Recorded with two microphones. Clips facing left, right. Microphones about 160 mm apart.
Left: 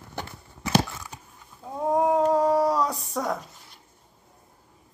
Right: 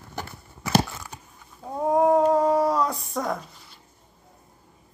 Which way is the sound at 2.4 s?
10° left (ahead or behind).